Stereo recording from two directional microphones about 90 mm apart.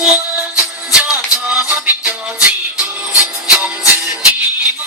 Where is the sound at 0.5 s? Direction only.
10° right (ahead or behind).